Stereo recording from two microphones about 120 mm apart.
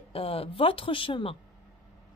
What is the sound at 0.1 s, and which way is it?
Speech, 50° left (ahead or behind).